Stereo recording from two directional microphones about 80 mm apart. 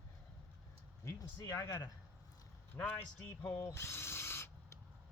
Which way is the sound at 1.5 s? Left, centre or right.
Left.